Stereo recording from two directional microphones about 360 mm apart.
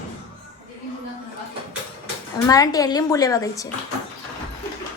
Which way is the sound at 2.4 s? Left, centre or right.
Centre.